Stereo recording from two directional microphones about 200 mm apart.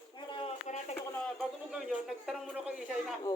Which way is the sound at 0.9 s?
10° left (ahead or behind).